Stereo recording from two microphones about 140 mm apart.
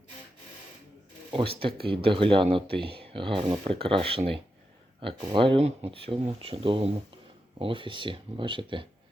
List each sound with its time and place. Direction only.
1.3 s speech: 40° right (ahead or behind)